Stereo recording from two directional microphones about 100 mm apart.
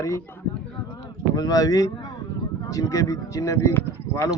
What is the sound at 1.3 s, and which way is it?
Speech, 40° left (ahead or behind).